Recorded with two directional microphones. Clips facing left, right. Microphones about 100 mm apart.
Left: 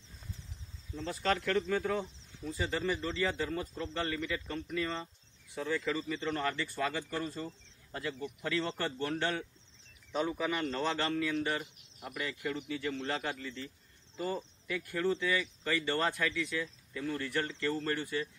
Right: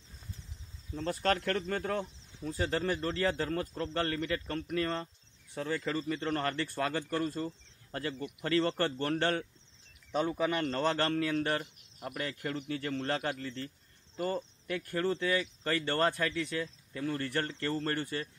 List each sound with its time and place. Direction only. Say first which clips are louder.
0.9 s speech: right 2 dB; 50° right (ahead or behind)
10.1 s speech: right 3 dB; 40° right (ahead or behind)